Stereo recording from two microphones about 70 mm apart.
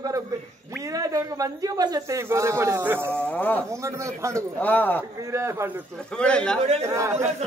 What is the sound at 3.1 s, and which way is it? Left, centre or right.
Speech, left.